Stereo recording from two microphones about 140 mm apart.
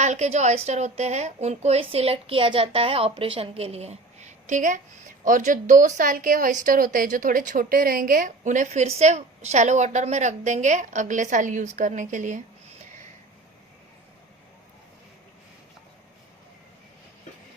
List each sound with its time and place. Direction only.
0.0 s a woman's voice: 55° right (ahead or behind)